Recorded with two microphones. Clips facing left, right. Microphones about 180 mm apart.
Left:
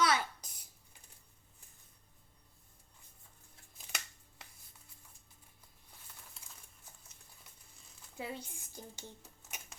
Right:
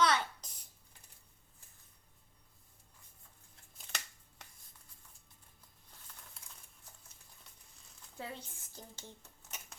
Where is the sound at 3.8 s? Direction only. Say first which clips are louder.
Even; 10° left (ahead or behind).